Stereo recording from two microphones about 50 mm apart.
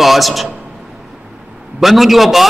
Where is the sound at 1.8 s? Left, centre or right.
Centre.